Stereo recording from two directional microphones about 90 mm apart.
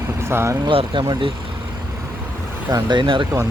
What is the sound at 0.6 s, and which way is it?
Speech, 75° right (ahead or behind).